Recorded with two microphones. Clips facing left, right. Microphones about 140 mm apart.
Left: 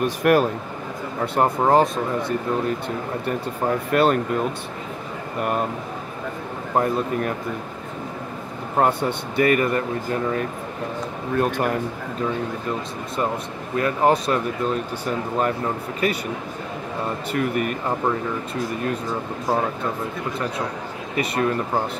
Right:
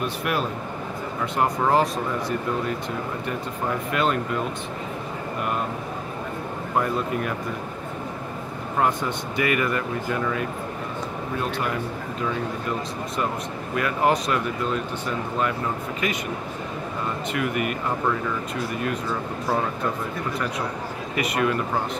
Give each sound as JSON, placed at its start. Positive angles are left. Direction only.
{"t": 0.0, "sound": "speech", "side_deg": 45}
{"t": 1.2, "sound": "speech", "side_deg": 35}
{"t": 3.9, "sound": "speech", "side_deg": 45}
{"t": 8.7, "sound": "speech", "side_deg": 40}
{"t": 11.3, "sound": "speech", "side_deg": 50}
{"t": 13.7, "sound": "speech", "side_deg": 35}
{"t": 17.3, "sound": "speech", "side_deg": 40}
{"t": 21.2, "sound": "speech", "side_deg": 35}